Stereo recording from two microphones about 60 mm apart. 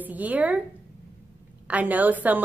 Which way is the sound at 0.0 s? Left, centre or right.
Right.